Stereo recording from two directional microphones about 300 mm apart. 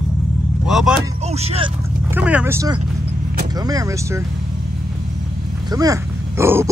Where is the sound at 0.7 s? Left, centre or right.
Centre.